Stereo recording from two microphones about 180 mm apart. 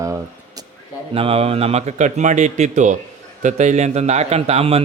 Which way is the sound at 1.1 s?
30° right (ahead or behind).